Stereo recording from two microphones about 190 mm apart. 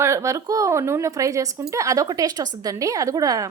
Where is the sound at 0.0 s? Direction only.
15° right (ahead or behind).